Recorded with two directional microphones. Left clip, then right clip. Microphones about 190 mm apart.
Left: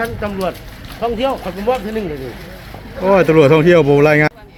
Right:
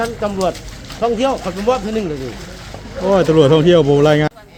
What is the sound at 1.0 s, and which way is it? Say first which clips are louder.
Speech: right 2 dB; 50° right (ahead or behind).